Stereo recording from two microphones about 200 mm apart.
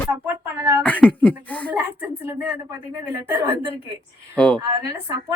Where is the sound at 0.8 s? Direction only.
5° left (ahead or behind).